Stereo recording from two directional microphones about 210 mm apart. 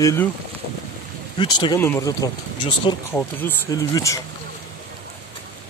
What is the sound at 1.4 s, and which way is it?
Speech, 20° left (ahead or behind).